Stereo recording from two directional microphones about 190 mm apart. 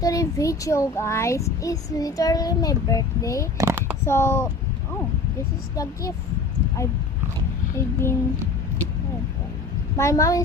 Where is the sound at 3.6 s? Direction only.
10° right (ahead or behind).